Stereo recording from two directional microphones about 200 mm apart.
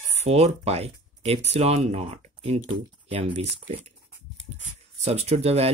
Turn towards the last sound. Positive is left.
turn(degrees=-30)  # may be behind; listen again after turning